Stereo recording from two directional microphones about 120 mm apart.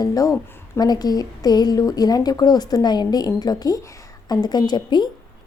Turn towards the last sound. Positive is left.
turn(degrees=40)  # may be behind; listen again after turning